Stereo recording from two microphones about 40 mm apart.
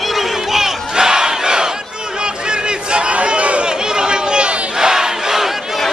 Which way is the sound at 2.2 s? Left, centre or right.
Right.